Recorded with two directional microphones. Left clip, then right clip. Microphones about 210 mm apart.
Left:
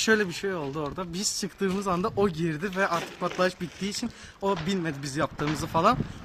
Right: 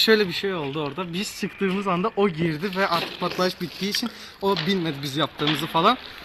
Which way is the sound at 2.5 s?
30° left (ahead or behind).